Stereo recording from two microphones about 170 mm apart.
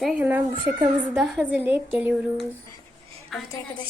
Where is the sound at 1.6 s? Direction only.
10° right (ahead or behind).